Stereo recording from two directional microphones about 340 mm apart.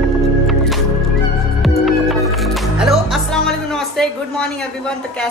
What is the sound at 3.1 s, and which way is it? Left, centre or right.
A woman's voice, centre.